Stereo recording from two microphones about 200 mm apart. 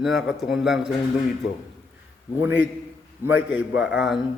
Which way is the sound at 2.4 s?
10° right (ahead or behind).